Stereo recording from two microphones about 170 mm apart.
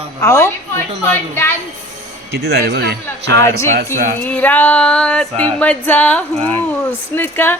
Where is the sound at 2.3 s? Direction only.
70° right (ahead or behind).